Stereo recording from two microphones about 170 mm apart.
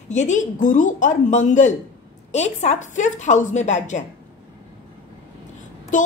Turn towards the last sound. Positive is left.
turn(degrees=50)  # may be behind; listen again after turning